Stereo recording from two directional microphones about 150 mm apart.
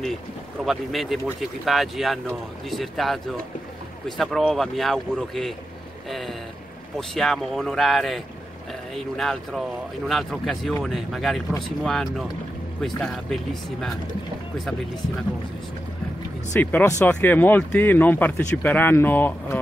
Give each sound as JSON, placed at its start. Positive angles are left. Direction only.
{"t": 0.7, "sound": "speech", "side_deg": 0}
{"t": 16.5, "sound": "speech", "side_deg": 15}